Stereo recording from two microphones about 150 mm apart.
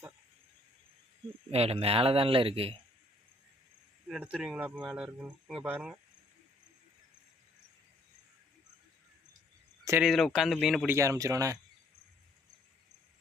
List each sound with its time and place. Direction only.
1.5 s speech: 40° right (ahead or behind)
4.1 s a man's voice: 5° right (ahead or behind)
10.0 s a man's voice: centre (ahead or behind)
10.8 s speech: 20° right (ahead or behind)